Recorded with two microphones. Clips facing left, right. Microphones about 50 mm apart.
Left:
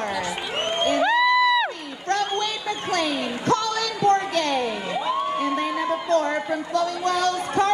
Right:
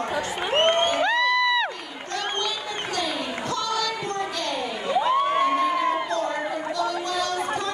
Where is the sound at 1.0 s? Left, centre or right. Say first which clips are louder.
Left 3 dB; centre.